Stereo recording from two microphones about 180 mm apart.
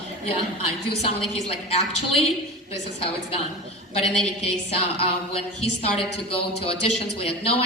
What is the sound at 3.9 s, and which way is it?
Speech, 35° left (ahead or behind).